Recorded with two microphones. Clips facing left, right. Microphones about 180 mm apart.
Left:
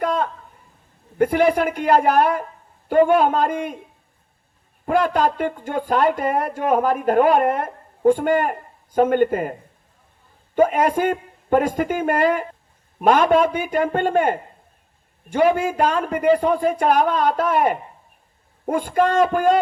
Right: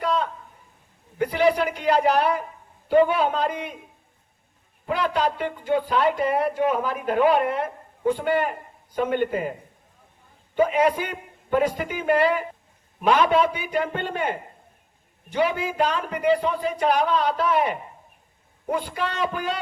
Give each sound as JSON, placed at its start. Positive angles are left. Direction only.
{"t": 0.0, "sound": "a sound", "side_deg": 50}
{"t": 1.2, "sound": "speech", "side_deg": 50}
{"t": 4.9, "sound": "speech", "side_deg": 45}
{"t": 10.5, "sound": "speech", "side_deg": 50}